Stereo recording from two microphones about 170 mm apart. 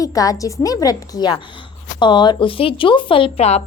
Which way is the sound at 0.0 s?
20° left (ahead or behind).